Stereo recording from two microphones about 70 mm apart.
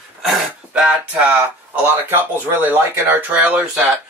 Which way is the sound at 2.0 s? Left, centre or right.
Right.